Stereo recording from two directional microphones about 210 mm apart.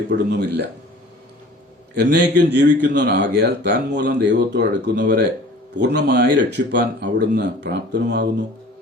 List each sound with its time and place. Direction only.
0.1 s speech: 50° right (ahead or behind)
2.0 s speech: 55° right (ahead or behind)